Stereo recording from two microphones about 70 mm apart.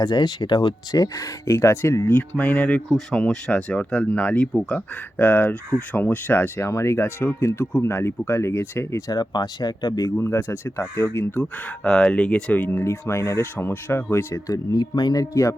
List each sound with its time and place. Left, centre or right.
0.0 s speech: left
2.3 s speech: left
6.7 s speech: left
9.1 s speech: left
10.2 s speech: left
11.8 s speech: centre
12.6 s speech: left
14.4 s speech: left
15.2 s speech: left